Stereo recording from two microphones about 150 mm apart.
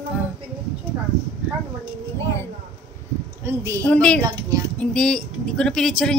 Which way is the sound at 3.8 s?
5° left (ahead or behind).